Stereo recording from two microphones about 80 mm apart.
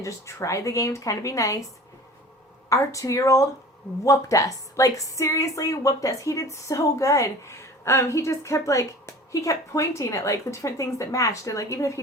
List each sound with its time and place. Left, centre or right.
0.0 s a woman's voice: left
2.6 s a woman's voice: left